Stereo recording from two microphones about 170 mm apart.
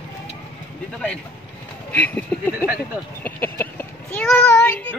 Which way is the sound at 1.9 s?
10° left (ahead or behind).